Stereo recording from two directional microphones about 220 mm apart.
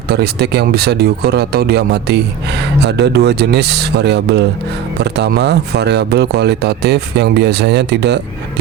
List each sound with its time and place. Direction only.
0.1 s speech: 45° right (ahead or behind)